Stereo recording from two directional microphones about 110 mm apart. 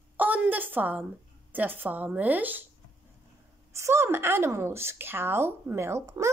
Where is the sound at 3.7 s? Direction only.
25° right (ahead or behind).